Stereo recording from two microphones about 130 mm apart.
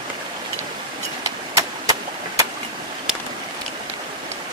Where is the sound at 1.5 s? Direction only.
25° right (ahead or behind).